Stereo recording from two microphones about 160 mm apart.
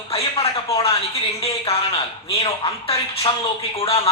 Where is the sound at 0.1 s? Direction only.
35° left (ahead or behind).